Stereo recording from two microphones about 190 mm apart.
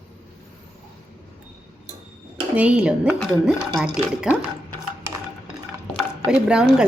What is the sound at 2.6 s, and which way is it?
A woman's voice, 5° right (ahead or behind).